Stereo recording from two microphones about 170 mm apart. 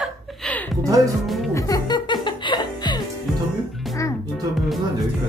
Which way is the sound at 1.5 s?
20° left (ahead or behind).